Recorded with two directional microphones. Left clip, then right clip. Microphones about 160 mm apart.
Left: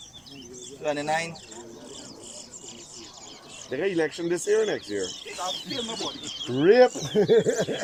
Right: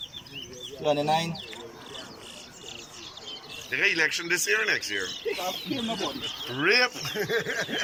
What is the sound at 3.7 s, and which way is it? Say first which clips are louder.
Speech: right 2 dB; 45° left (ahead or behind).